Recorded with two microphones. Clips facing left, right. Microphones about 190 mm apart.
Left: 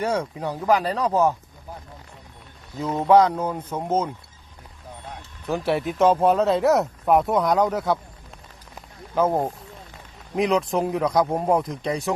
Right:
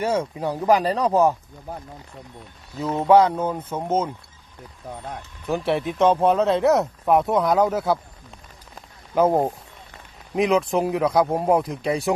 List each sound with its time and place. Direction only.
0.0 s speech: 5° right (ahead or behind)
2.9 s speech: 5° right (ahead or behind)
5.5 s speech: centre (ahead or behind)
9.1 s speech: 15° right (ahead or behind)
10.3 s speech: centre (ahead or behind)